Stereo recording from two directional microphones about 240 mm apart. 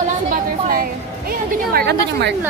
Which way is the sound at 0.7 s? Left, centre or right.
Right.